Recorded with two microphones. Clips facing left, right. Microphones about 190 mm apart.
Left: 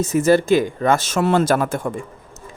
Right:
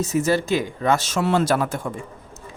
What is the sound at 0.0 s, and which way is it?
A man's voice, 50° left (ahead or behind).